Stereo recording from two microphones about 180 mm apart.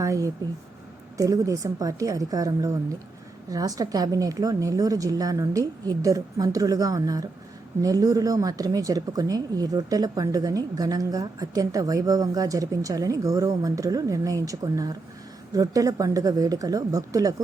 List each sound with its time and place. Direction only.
0.0 s a woman's voice: 15° right (ahead or behind)